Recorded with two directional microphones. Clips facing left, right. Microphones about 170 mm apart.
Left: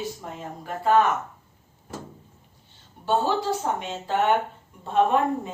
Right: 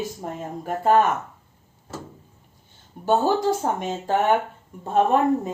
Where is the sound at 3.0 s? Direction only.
45° right (ahead or behind).